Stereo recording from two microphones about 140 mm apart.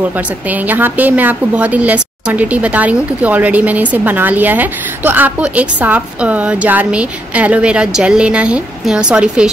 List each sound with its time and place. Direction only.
0.5 s a woman's voice: 10° right (ahead or behind)